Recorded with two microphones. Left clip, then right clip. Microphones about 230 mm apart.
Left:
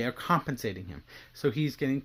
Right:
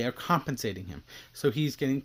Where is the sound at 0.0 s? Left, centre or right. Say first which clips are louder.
Even; centre.